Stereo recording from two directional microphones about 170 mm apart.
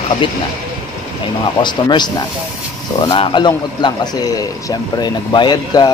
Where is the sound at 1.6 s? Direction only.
25° left (ahead or behind).